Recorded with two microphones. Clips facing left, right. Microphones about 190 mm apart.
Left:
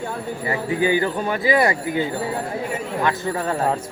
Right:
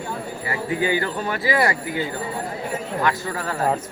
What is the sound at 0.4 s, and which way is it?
Speech, 20° left (ahead or behind).